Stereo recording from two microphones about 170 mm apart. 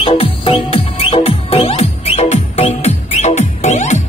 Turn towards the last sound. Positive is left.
turn(degrees=45)  # may be behind; listen again after turning